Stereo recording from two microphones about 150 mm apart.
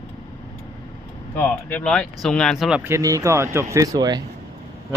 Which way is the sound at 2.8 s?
20° right (ahead or behind).